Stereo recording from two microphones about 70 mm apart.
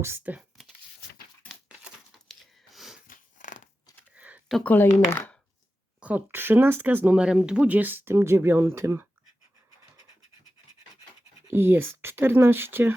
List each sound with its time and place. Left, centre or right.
0.3 s speech: right
2.7 s wheeze: centre
4.1 s computer keyboard: right
4.6 s speech: left
6.0 s speech: right
7.2 s speech: centre; by 9.0 s right
11.4 s speech: right